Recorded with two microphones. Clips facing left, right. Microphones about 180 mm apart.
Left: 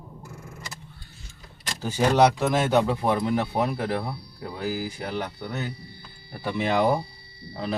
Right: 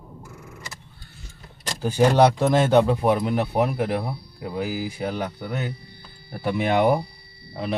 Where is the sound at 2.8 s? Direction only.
15° right (ahead or behind).